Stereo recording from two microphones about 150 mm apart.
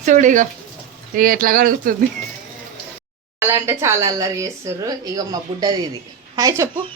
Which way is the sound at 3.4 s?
15° right (ahead or behind).